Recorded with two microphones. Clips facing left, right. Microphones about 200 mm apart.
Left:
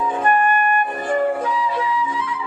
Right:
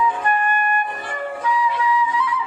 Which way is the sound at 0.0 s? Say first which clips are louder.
Left 3 dB; 50° left (ahead or behind).